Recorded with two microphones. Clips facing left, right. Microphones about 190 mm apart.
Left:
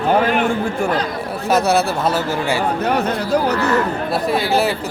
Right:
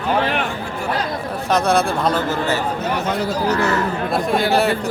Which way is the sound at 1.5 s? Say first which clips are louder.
Left 1 dB; 5° left (ahead or behind).